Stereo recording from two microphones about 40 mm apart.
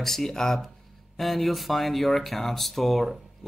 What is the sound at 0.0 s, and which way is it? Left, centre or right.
Speech, centre.